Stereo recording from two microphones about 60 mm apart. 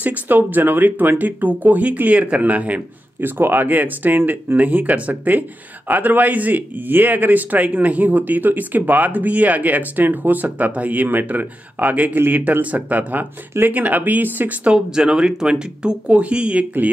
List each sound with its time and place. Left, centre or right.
0.0 s speech: right
3.2 s speech: right
14.7 s speech: centre